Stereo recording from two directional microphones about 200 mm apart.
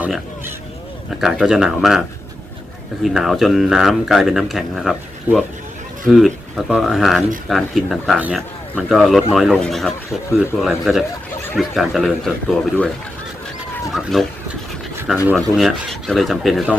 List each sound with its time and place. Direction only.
0.0 s speech: 5° right (ahead or behind)
13.9 s speech: centre (ahead or behind)
15.4 s speech: centre (ahead or behind)